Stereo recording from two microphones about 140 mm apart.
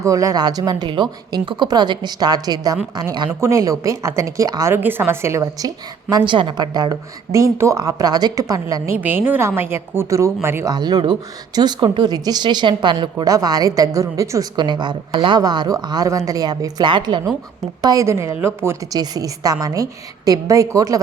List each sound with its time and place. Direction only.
0.0 s speech: 25° right (ahead or behind)
10.8 s speech: 30° right (ahead or behind)
17.8 s speech: 20° right (ahead or behind)